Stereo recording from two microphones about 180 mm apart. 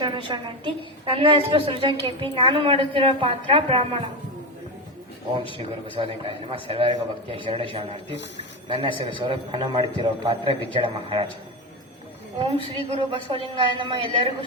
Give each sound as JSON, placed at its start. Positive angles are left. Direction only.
{"t": 0.0, "sound": "a woman's voice", "side_deg": -25}
{"t": 5.3, "sound": "a man's voice", "side_deg": -25}
{"t": 12.4, "sound": "a woman's voice", "side_deg": -30}